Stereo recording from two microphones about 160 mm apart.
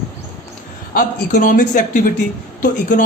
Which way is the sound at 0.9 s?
60° left (ahead or behind).